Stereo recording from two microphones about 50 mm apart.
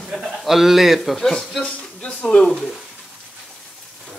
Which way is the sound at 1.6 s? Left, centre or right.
Left.